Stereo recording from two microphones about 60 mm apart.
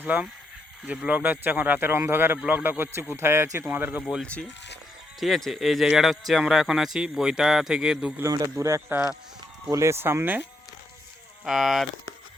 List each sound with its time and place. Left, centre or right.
0.0 s speech: right
1.9 s speech: right
3.7 s speech: right
4.2 s speech: left
5.2 s speech: centre
8.3 s speech: right
11.4 s speech: centre